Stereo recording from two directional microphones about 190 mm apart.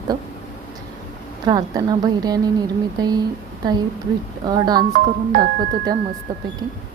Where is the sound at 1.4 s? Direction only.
20° right (ahead or behind).